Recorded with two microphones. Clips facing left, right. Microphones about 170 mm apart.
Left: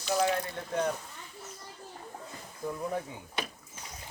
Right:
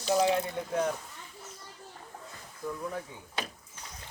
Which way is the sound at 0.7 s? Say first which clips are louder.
Even; 5° right (ahead or behind).